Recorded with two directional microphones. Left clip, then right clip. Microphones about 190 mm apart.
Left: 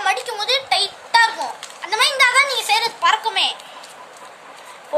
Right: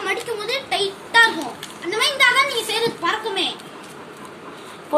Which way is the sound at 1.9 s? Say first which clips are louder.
Left 1 dB; 55° left (ahead or behind).